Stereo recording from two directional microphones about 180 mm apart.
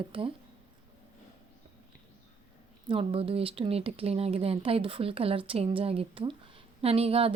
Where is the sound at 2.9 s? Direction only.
30° right (ahead or behind).